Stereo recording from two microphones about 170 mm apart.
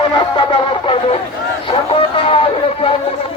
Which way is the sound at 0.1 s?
30° left (ahead or behind).